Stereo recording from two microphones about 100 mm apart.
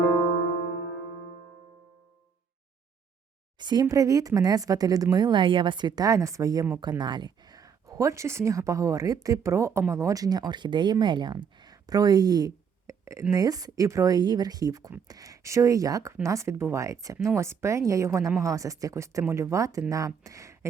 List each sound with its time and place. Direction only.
3.6 s a woman's voice: 45° right (ahead or behind)
7.0 s a woman's voice: 45° right (ahead or behind); by 20.7 s 30° right (ahead or behind)